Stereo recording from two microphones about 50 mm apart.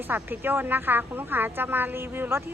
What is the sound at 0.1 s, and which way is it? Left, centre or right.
A woman's voice, right.